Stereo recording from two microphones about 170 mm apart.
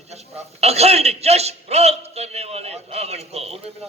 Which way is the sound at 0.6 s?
40° right (ahead or behind).